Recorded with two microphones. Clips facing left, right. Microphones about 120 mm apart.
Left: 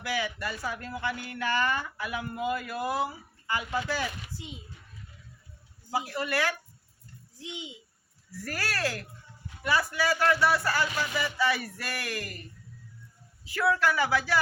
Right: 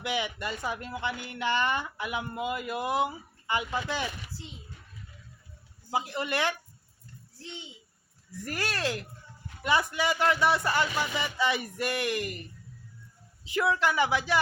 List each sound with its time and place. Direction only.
0.0 s speech: 20° right (ahead or behind)
5.9 s speech: 20° right (ahead or behind)
7.3 s a child's voice: 15° left (ahead or behind)
8.4 s speech: 20° right (ahead or behind)
13.4 s speech: 20° right (ahead or behind)